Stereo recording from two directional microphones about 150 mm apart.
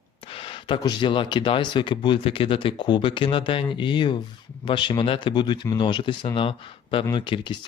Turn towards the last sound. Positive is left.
turn(degrees=35)  # may be behind; listen again after turning